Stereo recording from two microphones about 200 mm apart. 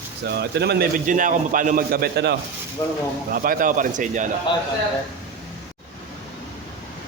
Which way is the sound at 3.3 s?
45° right (ahead or behind).